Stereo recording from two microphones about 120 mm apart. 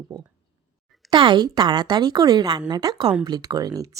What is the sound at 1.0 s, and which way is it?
A woman's voice, 40° right (ahead or behind).